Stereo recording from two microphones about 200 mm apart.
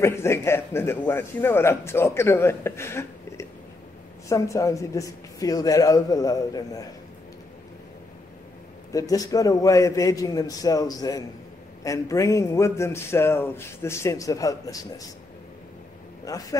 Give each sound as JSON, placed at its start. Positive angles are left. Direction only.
{"t": 0.0, "sound": "a man's voice", "side_deg": 15}
{"t": 8.9, "sound": "a man's voice", "side_deg": 15}
{"t": 16.3, "sound": "a man's voice", "side_deg": 15}